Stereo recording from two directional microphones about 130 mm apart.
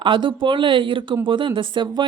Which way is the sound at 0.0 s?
40° right (ahead or behind).